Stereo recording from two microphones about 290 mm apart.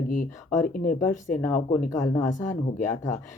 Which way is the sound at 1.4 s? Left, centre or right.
Centre.